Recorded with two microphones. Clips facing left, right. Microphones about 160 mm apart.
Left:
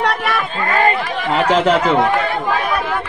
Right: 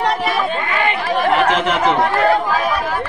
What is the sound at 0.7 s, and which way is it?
Chatter, 40° left (ahead or behind).